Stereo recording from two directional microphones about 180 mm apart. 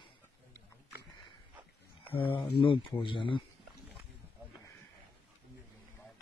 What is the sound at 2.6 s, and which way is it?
Speech, 30° left (ahead or behind).